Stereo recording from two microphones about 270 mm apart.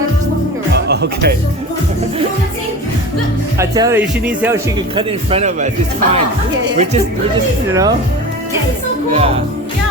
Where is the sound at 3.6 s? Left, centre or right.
Centre.